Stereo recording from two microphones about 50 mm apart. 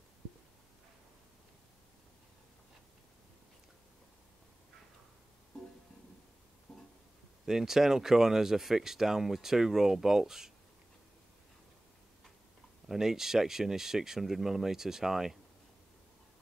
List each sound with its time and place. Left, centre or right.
6.7 s music: centre
7.4 s speech: centre
12.8 s speech: centre